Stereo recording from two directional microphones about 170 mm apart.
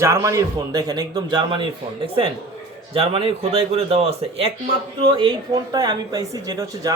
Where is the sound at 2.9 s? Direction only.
35° right (ahead or behind).